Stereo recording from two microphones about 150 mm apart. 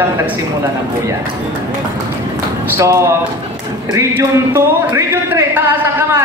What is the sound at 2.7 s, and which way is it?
Speech, 20° right (ahead or behind).